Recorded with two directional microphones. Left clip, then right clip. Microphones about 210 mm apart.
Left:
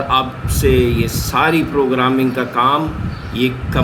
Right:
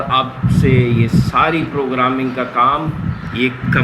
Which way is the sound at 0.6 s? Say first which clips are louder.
Left 2 dB; 35° left (ahead or behind).